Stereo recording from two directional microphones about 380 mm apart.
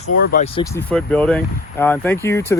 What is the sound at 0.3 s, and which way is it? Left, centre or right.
Speech, centre.